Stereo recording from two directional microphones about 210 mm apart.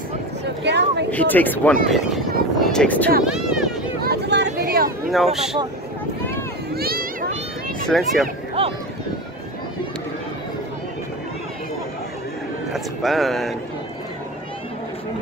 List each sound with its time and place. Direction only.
0.7 s speech: 55° right (ahead or behind)
1.1 s speech: 10° left (ahead or behind)
3.3 s vehicle: 5° right (ahead or behind)
4.0 s a sound: 50° right (ahead or behind)
5.1 s speech: centre (ahead or behind)
6.7 s vehicle: 45° right (ahead or behind)
7.9 s speech: centre (ahead or behind)
8.6 s speech: 30° right (ahead or behind)
12.7 s speech: centre (ahead or behind)